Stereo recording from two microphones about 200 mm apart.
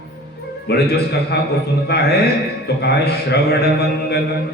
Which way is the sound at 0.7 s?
55° left (ahead or behind).